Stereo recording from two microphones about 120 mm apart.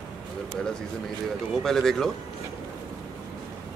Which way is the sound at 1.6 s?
5° left (ahead or behind).